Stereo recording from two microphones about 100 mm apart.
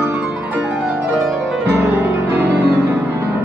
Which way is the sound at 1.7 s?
25° right (ahead or behind).